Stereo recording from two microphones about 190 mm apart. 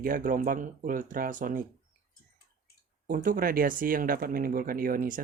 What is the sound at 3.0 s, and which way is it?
Speech, 45° right (ahead or behind).